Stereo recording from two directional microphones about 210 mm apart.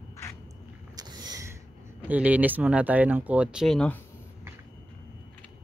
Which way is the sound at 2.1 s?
5° right (ahead or behind).